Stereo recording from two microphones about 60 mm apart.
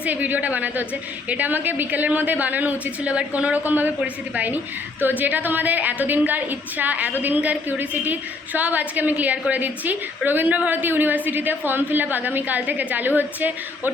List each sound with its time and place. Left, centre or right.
0.0 s a woman's voice: right